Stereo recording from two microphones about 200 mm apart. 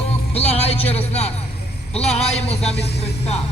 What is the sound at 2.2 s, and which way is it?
Speech, 30° left (ahead or behind).